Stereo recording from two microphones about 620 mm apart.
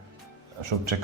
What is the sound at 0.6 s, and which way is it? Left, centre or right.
Speech, right.